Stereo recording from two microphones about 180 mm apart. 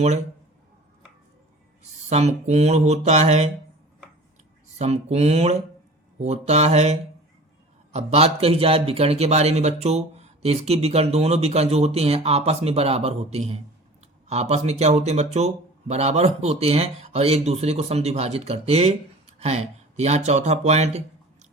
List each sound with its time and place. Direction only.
1.8 s a man's voice: 40° right (ahead or behind)
4.8 s a man's voice: 35° right (ahead or behind)